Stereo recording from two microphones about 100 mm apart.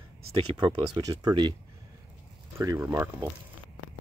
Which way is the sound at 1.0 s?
40° right (ahead or behind).